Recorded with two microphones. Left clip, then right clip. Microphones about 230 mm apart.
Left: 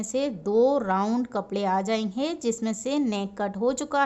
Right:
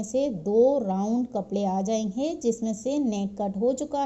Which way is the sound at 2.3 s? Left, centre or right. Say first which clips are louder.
Right 4 dB; centre.